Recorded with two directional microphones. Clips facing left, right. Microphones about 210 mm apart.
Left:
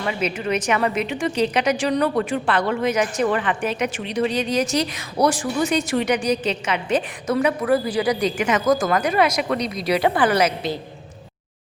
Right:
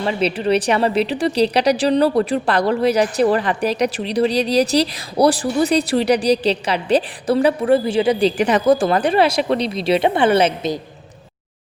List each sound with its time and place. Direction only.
0.0 s a woman's voice: 35° right (ahead or behind)